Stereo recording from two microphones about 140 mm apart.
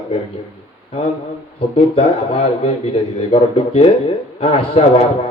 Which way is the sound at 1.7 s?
40° left (ahead or behind).